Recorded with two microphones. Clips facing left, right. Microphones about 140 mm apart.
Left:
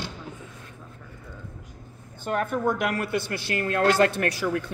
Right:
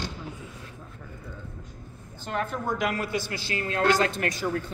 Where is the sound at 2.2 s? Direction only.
55° left (ahead or behind); by 4.7 s 70° left (ahead or behind).